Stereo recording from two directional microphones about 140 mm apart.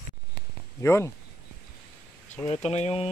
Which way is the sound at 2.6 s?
50° left (ahead or behind).